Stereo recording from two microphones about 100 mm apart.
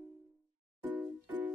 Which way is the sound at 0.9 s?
15° right (ahead or behind).